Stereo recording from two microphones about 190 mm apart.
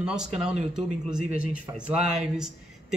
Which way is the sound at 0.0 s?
5° right (ahead or behind).